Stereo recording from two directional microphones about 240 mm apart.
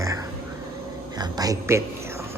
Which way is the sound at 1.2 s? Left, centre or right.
Centre.